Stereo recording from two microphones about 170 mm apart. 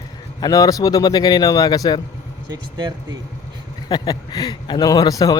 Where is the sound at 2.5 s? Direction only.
25° right (ahead or behind).